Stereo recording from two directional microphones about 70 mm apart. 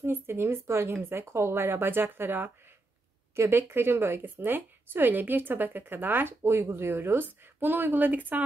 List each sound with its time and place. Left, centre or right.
0.0 s a woman's voice: right